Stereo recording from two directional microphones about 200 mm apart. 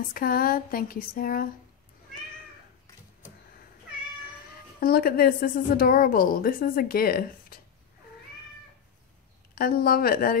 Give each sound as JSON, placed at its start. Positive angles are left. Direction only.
{"t": 0.1, "sound": "a woman's voice", "side_deg": 45}
{"t": 4.7, "sound": "a woman's voice", "side_deg": 50}
{"t": 9.6, "sound": "a woman's voice", "side_deg": 50}